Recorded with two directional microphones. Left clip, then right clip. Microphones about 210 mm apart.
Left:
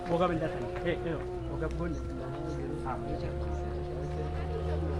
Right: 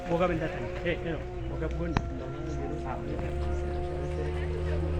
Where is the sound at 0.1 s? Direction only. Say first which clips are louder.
Right 1 dB; 20° right (ahead or behind).